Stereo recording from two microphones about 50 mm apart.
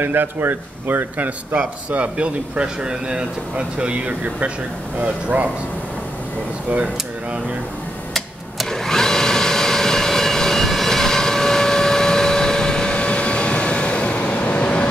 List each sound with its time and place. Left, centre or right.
0.0 s speech: right
1.6 s speech: right
8.1 s vacuum cleaner: centre; by 14.9 s left